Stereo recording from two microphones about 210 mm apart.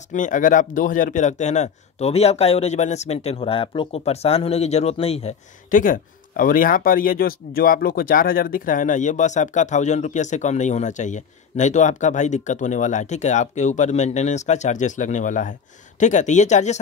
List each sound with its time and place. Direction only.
0.1 s speech: 35° left (ahead or behind)